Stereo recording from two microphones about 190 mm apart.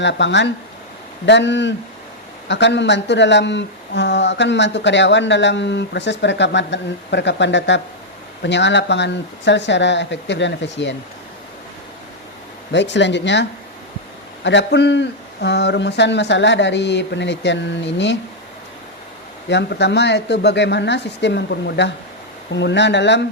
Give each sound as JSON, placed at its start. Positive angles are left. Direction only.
{"t": 0.0, "sound": "speech", "side_deg": 70}
{"t": 12.7, "sound": "speech", "side_deg": 70}
{"t": 19.5, "sound": "speech", "side_deg": 65}